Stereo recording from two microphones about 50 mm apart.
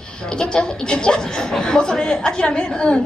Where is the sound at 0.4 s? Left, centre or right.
Centre.